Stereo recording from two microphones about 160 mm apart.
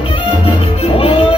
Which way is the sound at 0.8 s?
35° left (ahead or behind).